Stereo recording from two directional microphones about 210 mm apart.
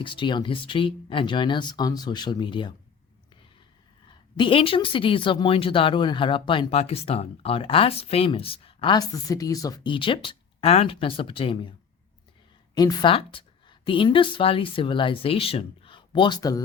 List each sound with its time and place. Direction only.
0.0 s speech: 25° left (ahead or behind)
4.4 s speech: 25° left (ahead or behind)
12.7 s speech: 20° left (ahead or behind)